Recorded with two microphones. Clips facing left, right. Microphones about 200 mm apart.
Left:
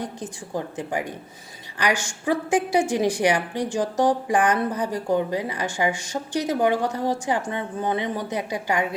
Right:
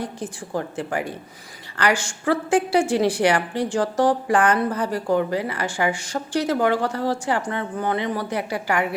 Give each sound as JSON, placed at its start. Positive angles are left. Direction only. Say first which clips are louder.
{"t": 0.0, "sound": "a woman's voice", "louder": "right 2 dB", "side_deg": 15}